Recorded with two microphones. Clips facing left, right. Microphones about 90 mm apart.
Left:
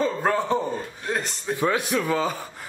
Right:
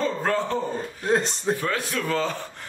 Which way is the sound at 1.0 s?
30° right (ahead or behind).